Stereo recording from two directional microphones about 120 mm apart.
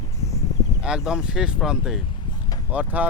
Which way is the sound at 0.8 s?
5° right (ahead or behind).